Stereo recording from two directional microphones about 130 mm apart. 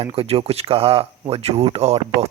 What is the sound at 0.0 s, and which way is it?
Speech, 45° right (ahead or behind).